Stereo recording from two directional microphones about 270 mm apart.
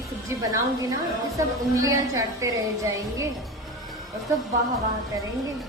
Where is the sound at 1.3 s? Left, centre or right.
Centre.